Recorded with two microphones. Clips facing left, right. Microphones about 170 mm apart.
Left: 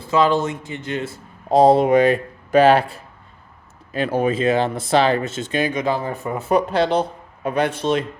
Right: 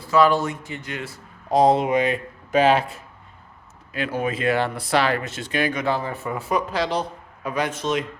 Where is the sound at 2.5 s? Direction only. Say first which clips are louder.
Left 4 dB; 60° left (ahead or behind).